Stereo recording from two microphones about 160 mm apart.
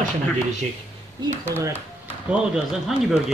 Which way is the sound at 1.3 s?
15° right (ahead or behind).